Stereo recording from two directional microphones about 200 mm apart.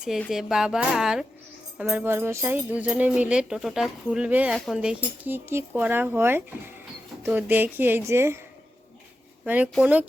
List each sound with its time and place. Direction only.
0.0 s speech: centre (ahead or behind)
9.4 s speech: 5° right (ahead or behind)